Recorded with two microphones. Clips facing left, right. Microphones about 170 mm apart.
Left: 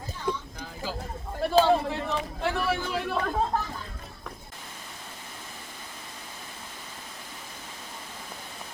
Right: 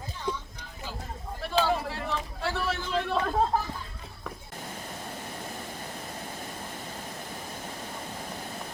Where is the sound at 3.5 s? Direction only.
5° right (ahead or behind).